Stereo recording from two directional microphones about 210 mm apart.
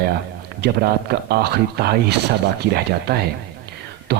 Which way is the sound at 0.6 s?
50° right (ahead or behind).